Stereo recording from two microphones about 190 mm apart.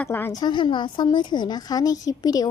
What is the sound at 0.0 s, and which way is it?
A woman's voice, 10° left (ahead or behind).